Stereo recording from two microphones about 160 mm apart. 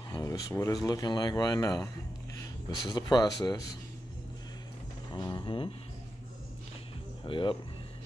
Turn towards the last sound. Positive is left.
turn(degrees=30)  # may be behind; listen again after turning